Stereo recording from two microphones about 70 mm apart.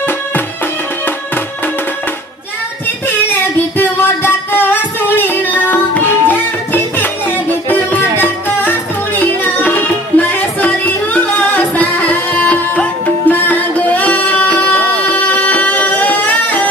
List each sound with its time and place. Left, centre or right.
3.7 s music: left
8.2 s music: left